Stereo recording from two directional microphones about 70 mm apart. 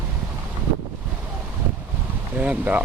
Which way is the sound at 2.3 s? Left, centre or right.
Centre.